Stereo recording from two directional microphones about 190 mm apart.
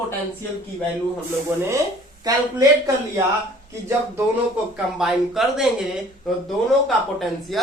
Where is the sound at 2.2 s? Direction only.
20° right (ahead or behind).